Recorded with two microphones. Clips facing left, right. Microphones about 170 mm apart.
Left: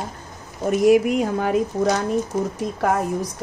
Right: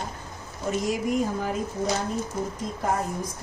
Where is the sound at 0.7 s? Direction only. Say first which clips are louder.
Left 10 dB; 65° left (ahead or behind).